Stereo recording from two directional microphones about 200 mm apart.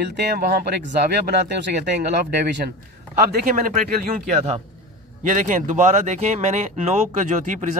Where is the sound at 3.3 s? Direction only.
45° right (ahead or behind).